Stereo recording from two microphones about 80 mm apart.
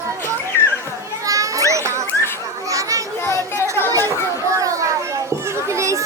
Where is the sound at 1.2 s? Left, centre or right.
Right.